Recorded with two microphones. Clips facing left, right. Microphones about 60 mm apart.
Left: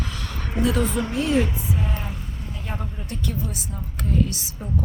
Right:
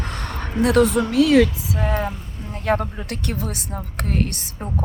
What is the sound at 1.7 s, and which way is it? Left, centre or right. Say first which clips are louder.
Speech: right 7 dB; right.